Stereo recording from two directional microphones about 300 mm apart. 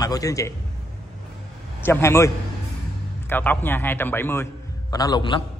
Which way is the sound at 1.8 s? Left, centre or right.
Centre.